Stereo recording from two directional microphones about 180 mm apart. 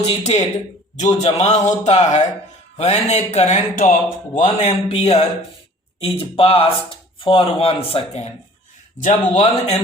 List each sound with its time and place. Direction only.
0.0 s speech: 35° left (ahead or behind)